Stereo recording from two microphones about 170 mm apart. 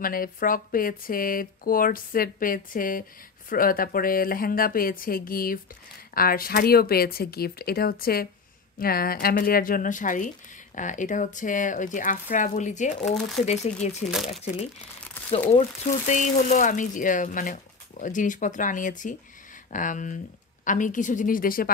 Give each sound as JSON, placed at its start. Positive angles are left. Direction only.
{"t": 0.0, "sound": "speech", "side_deg": 55}
{"t": 13.0, "sound": "speech", "side_deg": 0}
{"t": 13.5, "sound": "speech", "side_deg": 40}
{"t": 16.1, "sound": "speech", "side_deg": 45}